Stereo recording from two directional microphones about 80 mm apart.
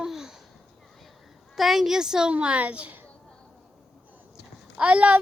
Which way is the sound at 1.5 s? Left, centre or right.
Centre.